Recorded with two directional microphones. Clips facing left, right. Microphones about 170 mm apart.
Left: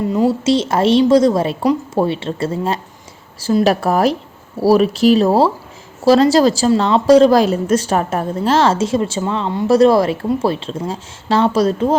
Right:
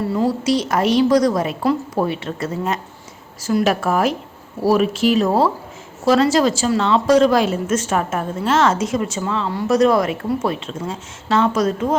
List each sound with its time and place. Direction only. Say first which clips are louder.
0.0 s a woman's voice: left 4 dB; 20° left (ahead or behind)